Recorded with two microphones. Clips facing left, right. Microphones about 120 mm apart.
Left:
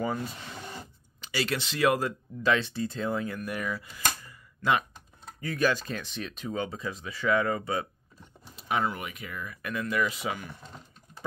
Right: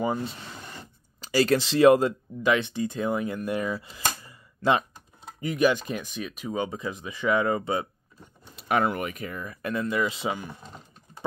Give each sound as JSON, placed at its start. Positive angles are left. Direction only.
{"t": 0.0, "sound": "speech", "side_deg": -20}
{"t": 1.2, "sound": "speech", "side_deg": -40}
{"t": 5.4, "sound": "speech", "side_deg": -15}
{"t": 8.5, "sound": "speech", "side_deg": -60}